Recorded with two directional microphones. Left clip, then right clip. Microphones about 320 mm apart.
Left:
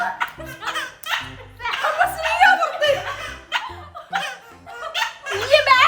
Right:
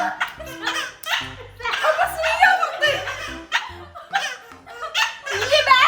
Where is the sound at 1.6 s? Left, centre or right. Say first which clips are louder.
Even; centre.